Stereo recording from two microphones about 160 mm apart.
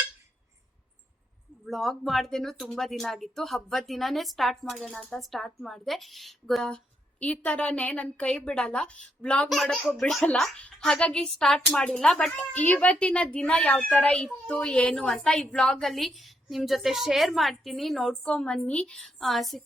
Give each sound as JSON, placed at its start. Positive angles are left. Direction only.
{"t": 1.6, "sound": "a woman's voice", "side_deg": 0}